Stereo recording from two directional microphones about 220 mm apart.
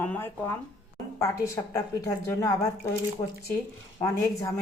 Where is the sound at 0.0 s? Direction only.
10° left (ahead or behind).